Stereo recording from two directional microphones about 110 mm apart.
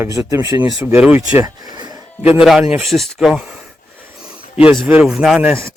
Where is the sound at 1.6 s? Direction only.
40° right (ahead or behind).